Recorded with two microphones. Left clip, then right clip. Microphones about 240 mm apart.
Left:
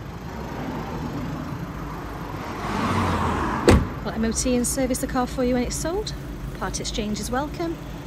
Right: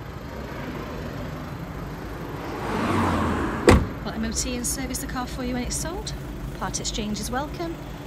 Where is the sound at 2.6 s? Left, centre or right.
Left.